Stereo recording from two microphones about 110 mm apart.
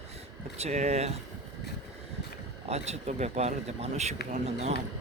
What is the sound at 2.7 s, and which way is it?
Speech, 80° right.